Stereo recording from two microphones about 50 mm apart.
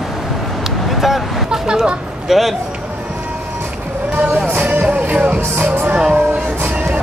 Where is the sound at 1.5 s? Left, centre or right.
Centre.